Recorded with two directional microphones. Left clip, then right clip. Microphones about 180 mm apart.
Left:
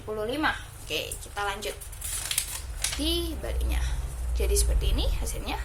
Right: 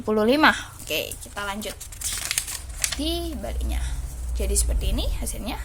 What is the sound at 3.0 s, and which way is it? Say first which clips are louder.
A woman's voice: right 1 dB; 35° right (ahead or behind).